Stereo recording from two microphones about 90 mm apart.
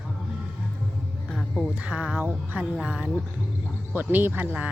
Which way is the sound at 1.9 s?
15° right (ahead or behind).